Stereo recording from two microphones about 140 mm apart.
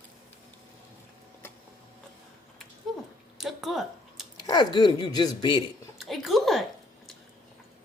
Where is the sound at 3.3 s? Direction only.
Centre (ahead or behind).